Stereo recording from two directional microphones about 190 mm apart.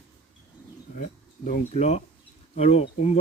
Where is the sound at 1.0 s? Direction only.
40° left (ahead or behind).